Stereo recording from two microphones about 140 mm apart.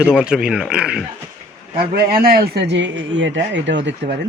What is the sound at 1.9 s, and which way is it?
Speech, 90° right.